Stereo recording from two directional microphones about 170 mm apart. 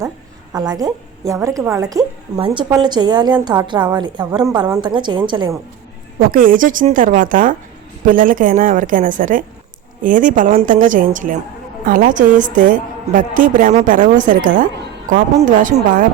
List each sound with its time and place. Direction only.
0.5 s a woman's voice: 25° right (ahead or behind)
6.1 s a woman's voice: 55° right (ahead or behind)